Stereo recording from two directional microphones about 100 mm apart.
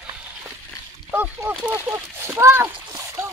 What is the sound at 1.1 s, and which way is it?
Speech, 20° right (ahead or behind).